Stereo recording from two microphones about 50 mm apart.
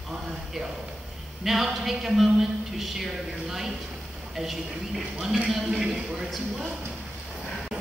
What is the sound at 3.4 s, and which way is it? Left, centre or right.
A man's voice, centre.